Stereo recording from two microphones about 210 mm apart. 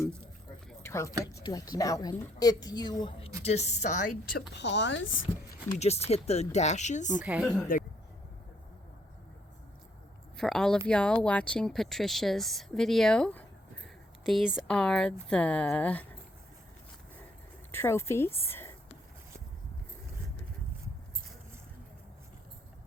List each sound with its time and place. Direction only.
0.7 s a sound: 10° left (ahead or behind)
1.2 s a woman's voice: 15° left (ahead or behind); by 5.2 s 65° left (ahead or behind)
5.7 s speech: 30° left (ahead or behind)
7.3 s speech: centre (ahead or behind)
10.3 s a woman's voice: centre (ahead or behind)
17.7 s a woman's voice: 10° left (ahead or behind)